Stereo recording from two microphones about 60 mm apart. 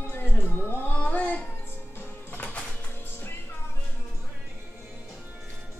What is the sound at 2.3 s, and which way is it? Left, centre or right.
Music, left.